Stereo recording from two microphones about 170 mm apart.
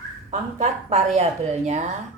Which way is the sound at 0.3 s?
45° right (ahead or behind).